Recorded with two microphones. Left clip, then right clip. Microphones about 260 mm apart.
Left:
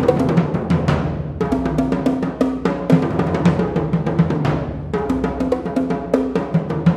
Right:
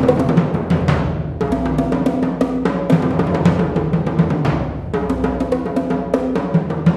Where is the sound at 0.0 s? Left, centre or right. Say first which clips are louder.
Right 1 dB; left.